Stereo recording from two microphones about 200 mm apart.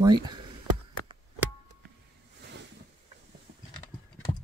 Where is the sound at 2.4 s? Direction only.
60° right (ahead or behind).